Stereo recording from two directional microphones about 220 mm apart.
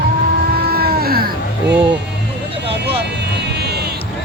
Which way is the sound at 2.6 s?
50° right (ahead or behind).